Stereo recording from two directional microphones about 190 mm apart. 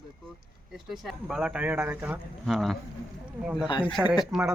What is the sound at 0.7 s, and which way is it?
Speech, centre (ahead or behind).